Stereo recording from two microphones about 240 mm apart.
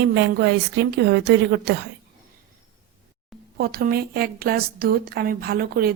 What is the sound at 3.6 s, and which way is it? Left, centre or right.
Speech, right.